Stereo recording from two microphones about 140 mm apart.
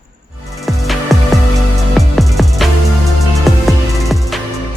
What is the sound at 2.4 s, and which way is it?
Music, centre (ahead or behind).